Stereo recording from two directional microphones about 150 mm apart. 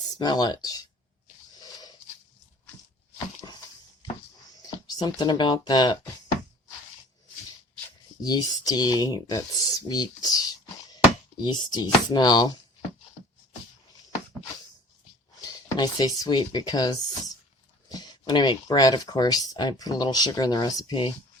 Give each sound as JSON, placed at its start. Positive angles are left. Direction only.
{"t": 0.1, "sound": "speech", "side_deg": 25}
{"t": 4.9, "sound": "speech", "side_deg": 25}
{"t": 8.2, "sound": "speech", "side_deg": 25}
{"t": 15.4, "sound": "speech", "side_deg": 25}